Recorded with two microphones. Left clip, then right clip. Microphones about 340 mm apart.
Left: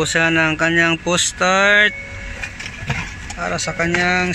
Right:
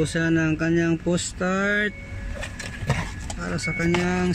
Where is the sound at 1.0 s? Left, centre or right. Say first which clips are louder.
Left 8 dB; left.